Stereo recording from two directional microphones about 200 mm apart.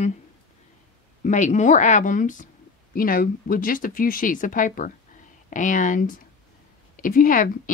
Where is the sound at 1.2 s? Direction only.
35° left (ahead or behind).